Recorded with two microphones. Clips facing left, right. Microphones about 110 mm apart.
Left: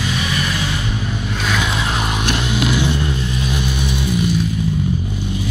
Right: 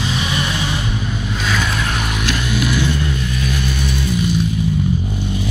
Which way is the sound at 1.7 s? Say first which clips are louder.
Left 1 dB; 20° left (ahead or behind).